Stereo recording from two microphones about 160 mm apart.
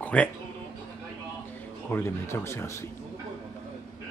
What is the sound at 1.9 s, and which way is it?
Speech, 15° left (ahead or behind).